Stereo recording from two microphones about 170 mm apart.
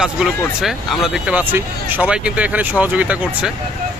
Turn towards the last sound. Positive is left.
turn(degrees=-10)  # may be behind; listen again after turning